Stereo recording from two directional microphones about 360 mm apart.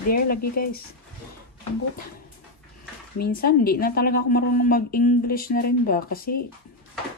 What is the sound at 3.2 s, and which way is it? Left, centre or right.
A woman's voice, left.